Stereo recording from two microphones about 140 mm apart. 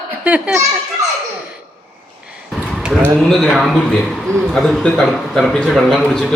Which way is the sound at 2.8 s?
5° right (ahead or behind).